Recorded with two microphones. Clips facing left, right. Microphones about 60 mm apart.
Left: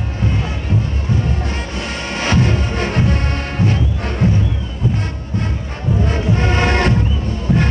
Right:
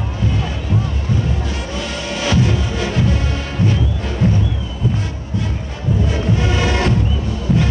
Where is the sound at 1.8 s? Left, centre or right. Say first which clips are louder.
Even; left.